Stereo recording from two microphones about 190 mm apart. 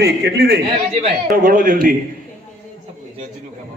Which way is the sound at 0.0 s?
60° right (ahead or behind).